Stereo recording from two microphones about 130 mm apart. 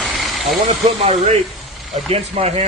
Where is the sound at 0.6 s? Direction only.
60° right (ahead or behind).